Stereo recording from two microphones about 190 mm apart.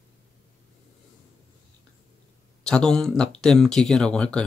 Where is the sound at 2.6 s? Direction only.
5° left (ahead or behind).